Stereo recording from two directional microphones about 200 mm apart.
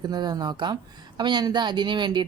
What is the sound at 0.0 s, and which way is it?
Speech, 20° right (ahead or behind).